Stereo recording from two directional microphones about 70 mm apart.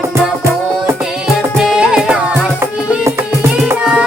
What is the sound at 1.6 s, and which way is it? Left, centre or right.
Music, centre.